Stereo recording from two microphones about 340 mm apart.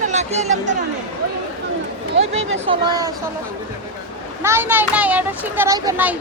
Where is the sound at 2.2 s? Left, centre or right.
Centre.